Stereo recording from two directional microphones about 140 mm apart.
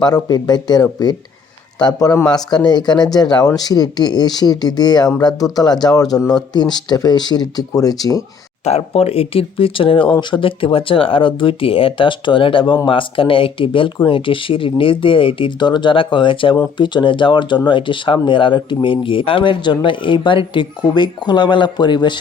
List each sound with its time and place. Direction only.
0.0 s speech: 30° left (ahead or behind)
8.6 s speech: 50° left (ahead or behind)